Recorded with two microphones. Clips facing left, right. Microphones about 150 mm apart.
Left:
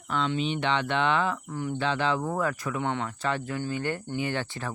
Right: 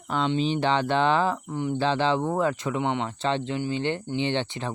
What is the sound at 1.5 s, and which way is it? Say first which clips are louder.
Speech: right 4 dB; 20° right (ahead or behind).